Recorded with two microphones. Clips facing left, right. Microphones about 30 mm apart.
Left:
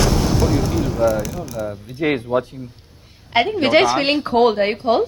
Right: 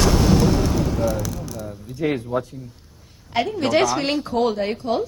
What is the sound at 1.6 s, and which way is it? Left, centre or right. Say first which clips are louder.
A woman's voice: left 4 dB; left.